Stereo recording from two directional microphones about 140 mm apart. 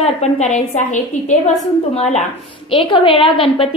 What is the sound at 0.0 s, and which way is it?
A woman's voice, 55° left (ahead or behind).